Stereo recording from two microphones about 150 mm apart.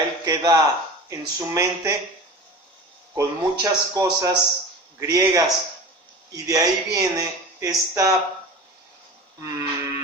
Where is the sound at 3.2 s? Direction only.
25° right (ahead or behind).